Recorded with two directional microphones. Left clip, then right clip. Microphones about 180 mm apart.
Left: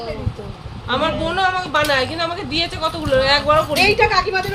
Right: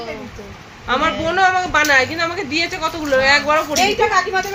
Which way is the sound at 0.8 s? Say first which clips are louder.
Right 2 dB; 35° right (ahead or behind).